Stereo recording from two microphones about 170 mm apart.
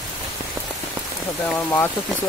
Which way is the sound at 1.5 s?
15° left (ahead or behind).